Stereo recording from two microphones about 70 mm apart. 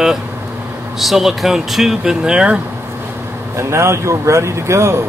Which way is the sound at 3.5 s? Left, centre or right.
Right.